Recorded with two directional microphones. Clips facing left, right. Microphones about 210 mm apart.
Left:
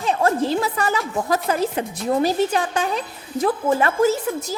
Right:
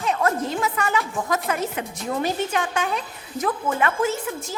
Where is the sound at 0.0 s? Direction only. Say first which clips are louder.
Left 3 dB; 30° left (ahead or behind).